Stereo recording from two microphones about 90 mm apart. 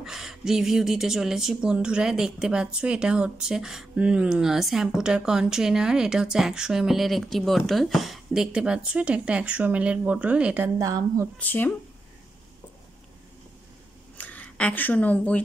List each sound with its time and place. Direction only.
0.0 s a woman's voice: 5° right (ahead or behind)
10.8 s a woman's voice: 40° right (ahead or behind)
11.3 s speech: 20° left (ahead or behind)
14.1 s speech: 20° left (ahead or behind)